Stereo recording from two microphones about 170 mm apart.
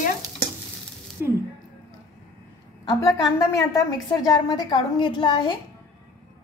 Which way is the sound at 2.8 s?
20° left (ahead or behind).